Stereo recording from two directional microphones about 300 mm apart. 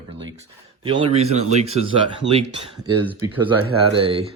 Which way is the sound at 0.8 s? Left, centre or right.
Centre.